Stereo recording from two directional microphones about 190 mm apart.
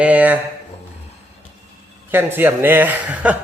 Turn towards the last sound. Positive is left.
turn(degrees=-10)  # may be behind; listen again after turning